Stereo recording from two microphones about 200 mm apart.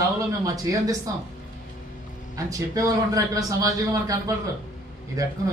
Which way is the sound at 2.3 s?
15° right (ahead or behind).